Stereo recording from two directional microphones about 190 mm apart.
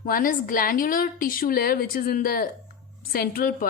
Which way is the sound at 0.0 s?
45° left (ahead or behind).